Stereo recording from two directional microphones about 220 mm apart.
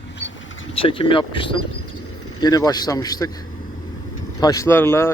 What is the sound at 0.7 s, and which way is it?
Speech, 25° left (ahead or behind).